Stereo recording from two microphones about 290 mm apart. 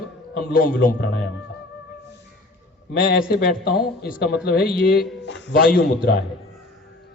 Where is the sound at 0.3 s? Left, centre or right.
Left.